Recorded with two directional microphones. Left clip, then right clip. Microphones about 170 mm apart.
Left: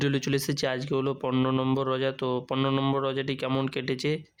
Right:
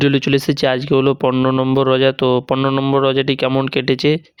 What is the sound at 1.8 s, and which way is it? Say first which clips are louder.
Speech: right 14 dB; 45° right (ahead or behind).